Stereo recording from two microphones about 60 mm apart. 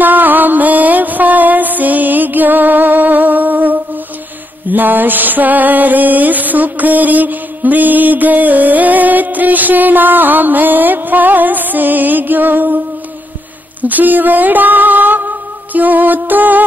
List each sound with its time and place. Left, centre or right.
0.0 s music: right
4.6 s a sound: right
13.7 s music: right